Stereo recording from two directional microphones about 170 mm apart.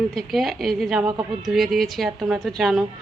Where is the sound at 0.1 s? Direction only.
Centre (ahead or behind).